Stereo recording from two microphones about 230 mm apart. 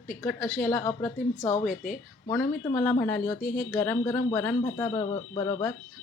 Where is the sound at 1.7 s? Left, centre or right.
Left.